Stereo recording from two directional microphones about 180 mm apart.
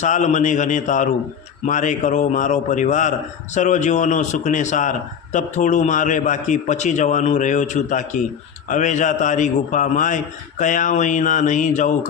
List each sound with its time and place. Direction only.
0.0 s a man's voice: 40° left (ahead or behind)